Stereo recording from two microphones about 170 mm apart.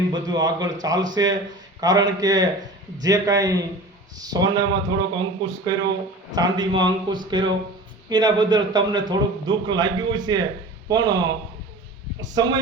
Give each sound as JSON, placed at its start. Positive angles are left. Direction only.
{"t": 0.1, "sound": "a man's voice", "side_deg": -25}
{"t": 6.3, "sound": "a man's voice", "side_deg": -25}
{"t": 12.2, "sound": "a man's voice", "side_deg": -25}